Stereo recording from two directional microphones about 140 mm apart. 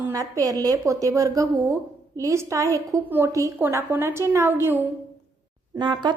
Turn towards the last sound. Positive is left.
turn(degrees=-30)  # may be behind; listen again after turning